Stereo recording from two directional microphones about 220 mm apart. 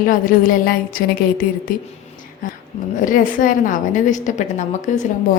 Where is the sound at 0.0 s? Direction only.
40° left (ahead or behind).